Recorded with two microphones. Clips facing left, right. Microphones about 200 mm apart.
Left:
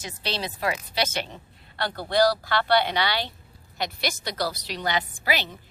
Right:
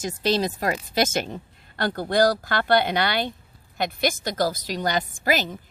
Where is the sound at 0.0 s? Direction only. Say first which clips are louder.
Right 9 dB; 45° right (ahead or behind).